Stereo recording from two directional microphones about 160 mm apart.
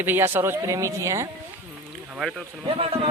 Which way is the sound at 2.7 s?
35° right (ahead or behind).